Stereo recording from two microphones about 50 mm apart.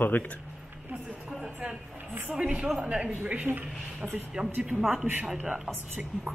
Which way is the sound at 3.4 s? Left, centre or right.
Right.